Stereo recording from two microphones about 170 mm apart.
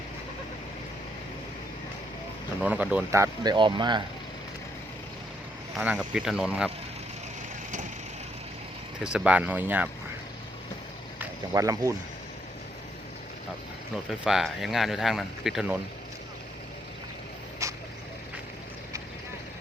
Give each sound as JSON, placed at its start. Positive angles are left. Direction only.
{"t": 2.6, "sound": "speech", "side_deg": -10}
{"t": 5.7, "sound": "speech", "side_deg": -5}
{"t": 9.0, "sound": "speech", "side_deg": -5}
{"t": 11.2, "sound": "speech", "side_deg": -20}
{"t": 13.9, "sound": "speech", "side_deg": 0}
{"t": 17.6, "sound": "vehicle", "side_deg": -20}